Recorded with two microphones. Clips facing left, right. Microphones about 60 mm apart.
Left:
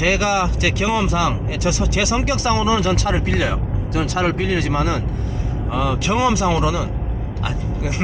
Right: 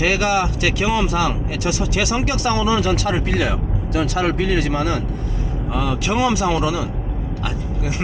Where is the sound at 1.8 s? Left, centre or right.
Centre.